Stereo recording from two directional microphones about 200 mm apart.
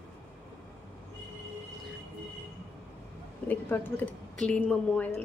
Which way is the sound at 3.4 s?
10° left (ahead or behind).